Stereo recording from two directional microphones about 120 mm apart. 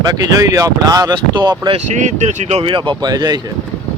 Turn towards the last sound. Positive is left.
turn(degrees=-35)  # may be behind; listen again after turning